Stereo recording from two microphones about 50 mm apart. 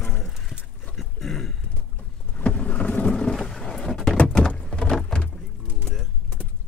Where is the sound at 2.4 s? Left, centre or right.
Left.